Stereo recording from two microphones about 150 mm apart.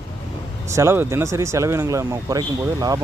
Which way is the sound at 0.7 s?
20° right (ahead or behind).